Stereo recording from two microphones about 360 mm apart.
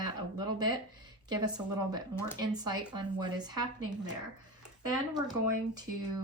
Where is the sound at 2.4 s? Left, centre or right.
Centre.